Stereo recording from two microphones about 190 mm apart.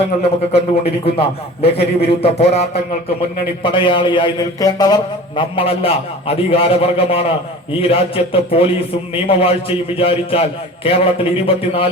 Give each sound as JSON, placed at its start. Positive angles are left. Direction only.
{"t": 0.2, "sound": "a man's voice", "side_deg": 30}